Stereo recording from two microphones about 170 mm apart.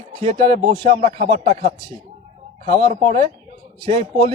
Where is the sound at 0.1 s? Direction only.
30° right (ahead or behind).